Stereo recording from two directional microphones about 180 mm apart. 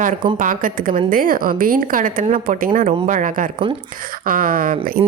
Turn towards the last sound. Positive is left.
turn(degrees=-50)  # may be behind; listen again after turning